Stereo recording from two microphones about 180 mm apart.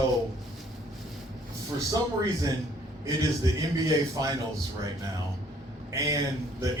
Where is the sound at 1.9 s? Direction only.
20° right (ahead or behind).